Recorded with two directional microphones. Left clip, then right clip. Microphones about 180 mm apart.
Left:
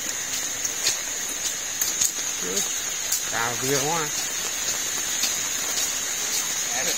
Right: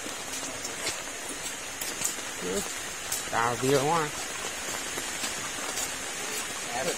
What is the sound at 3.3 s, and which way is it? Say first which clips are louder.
Speech: right 1 dB; 20° right (ahead or behind).